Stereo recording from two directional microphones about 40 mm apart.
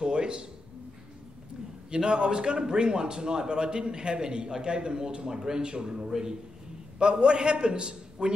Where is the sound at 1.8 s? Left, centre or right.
Right.